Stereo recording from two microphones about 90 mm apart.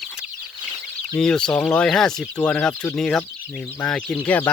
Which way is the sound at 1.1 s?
10° left (ahead or behind).